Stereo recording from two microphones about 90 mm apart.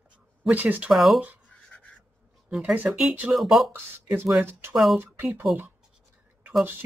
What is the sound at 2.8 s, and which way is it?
Speech, centre (ahead or behind).